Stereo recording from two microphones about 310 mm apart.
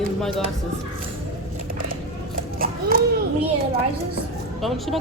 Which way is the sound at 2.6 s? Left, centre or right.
Right.